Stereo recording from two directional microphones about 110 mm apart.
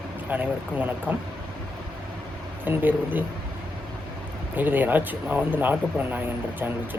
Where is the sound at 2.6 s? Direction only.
15° right (ahead or behind).